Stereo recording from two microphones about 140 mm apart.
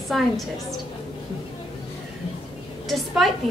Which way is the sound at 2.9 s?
Centre (ahead or behind).